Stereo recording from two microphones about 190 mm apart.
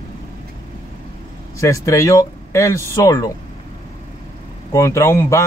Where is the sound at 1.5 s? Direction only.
15° left (ahead or behind).